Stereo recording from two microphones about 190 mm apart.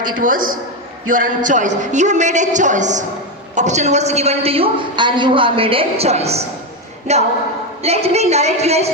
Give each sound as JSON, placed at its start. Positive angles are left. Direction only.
{"t": 0.2, "sound": "a woman's voice", "side_deg": -45}
{"t": 7.8, "sound": "a woman's voice", "side_deg": -35}